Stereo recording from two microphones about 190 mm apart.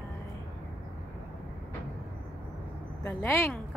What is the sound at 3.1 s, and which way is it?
Speech, 15° left (ahead or behind).